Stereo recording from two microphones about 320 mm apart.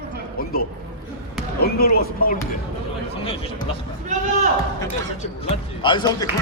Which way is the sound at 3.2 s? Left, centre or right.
Centre.